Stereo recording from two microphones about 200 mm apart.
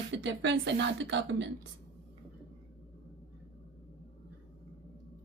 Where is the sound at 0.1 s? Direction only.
65° right (ahead or behind).